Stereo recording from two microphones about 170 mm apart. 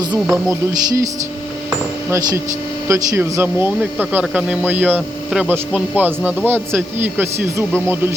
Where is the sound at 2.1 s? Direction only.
15° right (ahead or behind).